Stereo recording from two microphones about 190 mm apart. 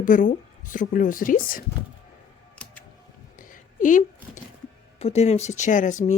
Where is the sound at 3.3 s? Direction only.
45° left (ahead or behind).